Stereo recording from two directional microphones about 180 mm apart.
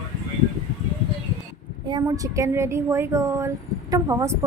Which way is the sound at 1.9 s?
20° right (ahead or behind).